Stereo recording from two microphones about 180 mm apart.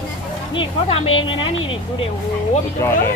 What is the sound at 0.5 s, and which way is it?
Speech, 35° left (ahead or behind).